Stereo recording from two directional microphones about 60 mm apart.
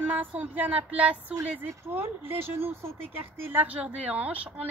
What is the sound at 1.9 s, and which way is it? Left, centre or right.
Speech, right.